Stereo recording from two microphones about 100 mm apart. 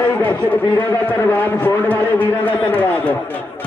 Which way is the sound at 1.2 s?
15° left (ahead or behind).